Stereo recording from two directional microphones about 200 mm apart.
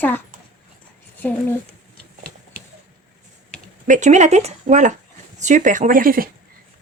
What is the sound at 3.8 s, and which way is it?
Speech, 40° right (ahead or behind).